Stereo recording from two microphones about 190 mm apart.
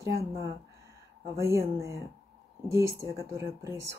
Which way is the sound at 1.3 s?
15° right (ahead or behind).